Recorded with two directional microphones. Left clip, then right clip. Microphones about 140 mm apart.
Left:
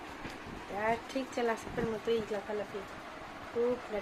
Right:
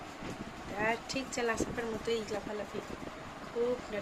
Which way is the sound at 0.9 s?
25° left (ahead or behind).